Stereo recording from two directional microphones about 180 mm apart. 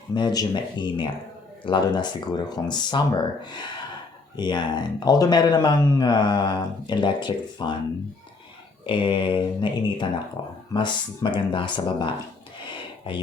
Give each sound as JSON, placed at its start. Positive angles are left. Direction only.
{"t": 0.1, "sound": "speech", "side_deg": 25}
{"t": 8.9, "sound": "speech", "side_deg": 25}